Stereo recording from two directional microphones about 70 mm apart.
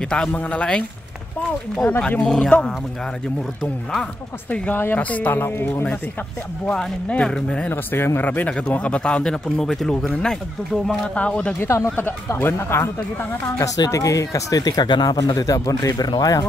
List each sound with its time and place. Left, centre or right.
0.3 s speech: centre
1.9 s speech: centre
4.5 s speech: left
6.6 s speech: centre
7.7 s speech: left
8.5 s speech: centre
11.1 s speech: centre
11.6 s speech: left
12.4 s speech: left
13.7 s speech: left
15.1 s speech: left